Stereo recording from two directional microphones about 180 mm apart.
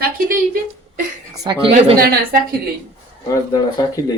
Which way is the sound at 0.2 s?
50° right (ahead or behind).